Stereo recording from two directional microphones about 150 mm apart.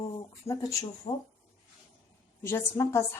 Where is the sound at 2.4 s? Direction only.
20° left (ahead or behind).